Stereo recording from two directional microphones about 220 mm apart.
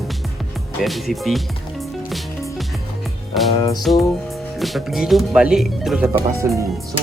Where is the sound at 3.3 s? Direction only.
Centre (ahead or behind).